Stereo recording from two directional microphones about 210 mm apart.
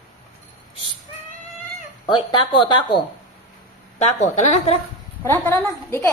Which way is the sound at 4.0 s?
35° left (ahead or behind).